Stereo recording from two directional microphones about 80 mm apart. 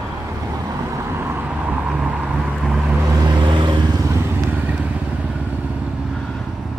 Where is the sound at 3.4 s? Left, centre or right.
Right.